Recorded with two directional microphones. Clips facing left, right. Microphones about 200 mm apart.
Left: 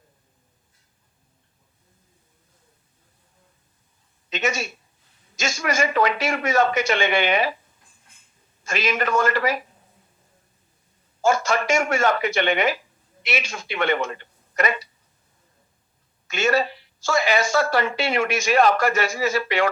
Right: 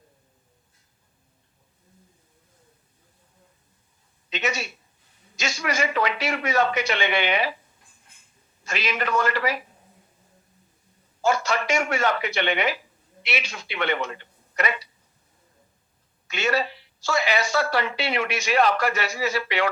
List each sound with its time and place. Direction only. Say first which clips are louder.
4.3 s a sound: left 3 dB; 45° left (ahead or behind)
5.4 s a woman's voice: left 3 dB; 45° left (ahead or behind)
8.6 s a woman's voice: left 4 dB; 45° left (ahead or behind)
11.2 s a woman's voice: left 3 dB; 45° left (ahead or behind)
16.2 s a woman's voice: left 4 dB; 45° left (ahead or behind)